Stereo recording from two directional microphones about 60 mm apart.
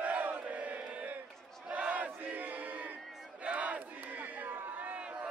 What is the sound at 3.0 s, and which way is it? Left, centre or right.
Battle cry, centre.